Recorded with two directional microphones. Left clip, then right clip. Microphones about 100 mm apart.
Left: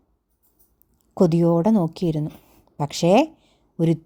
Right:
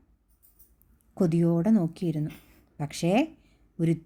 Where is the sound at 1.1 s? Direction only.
50° left (ahead or behind).